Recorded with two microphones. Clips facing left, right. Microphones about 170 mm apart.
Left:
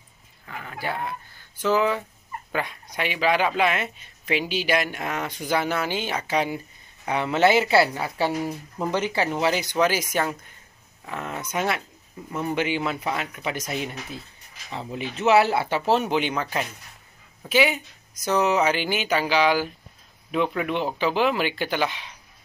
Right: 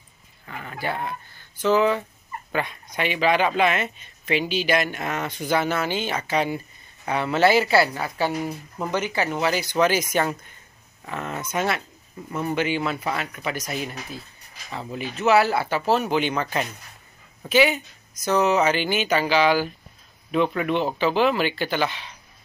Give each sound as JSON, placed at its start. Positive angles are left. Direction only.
{"t": 0.5, "sound": "speech", "side_deg": 0}